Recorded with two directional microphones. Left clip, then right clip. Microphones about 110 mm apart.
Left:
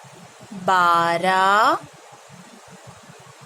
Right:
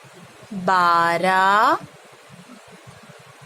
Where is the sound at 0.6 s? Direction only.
20° right (ahead or behind).